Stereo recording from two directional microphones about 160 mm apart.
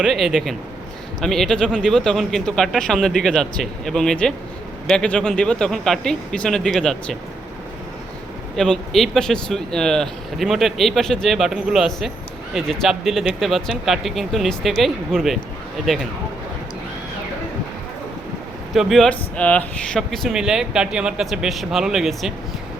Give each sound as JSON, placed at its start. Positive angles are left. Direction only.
{"t": 0.0, "sound": "speech", "side_deg": -5}
{"t": 8.5, "sound": "speech", "side_deg": 5}
{"t": 18.7, "sound": "speech", "side_deg": 0}